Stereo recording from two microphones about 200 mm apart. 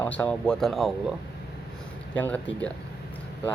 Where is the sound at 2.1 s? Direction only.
10° left (ahead or behind).